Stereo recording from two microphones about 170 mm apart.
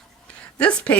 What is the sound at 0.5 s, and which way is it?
Speech, 10° left (ahead or behind).